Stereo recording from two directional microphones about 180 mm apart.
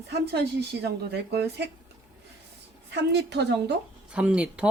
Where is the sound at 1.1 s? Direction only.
65° right (ahead or behind).